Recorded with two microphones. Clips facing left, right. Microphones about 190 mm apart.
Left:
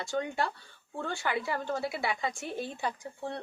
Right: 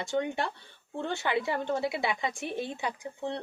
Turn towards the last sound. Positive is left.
turn(degrees=-20)  # may be behind; listen again after turning